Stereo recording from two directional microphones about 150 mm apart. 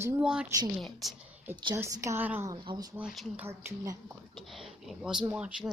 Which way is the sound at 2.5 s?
35° right (ahead or behind).